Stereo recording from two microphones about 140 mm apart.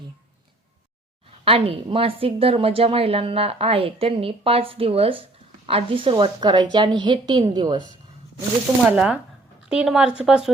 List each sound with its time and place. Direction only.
1.5 s a woman's voice: 45° right (ahead or behind)
8.9 s speech: 10° right (ahead or behind)